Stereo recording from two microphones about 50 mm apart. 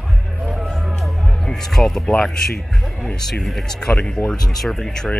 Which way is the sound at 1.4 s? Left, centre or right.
Centre.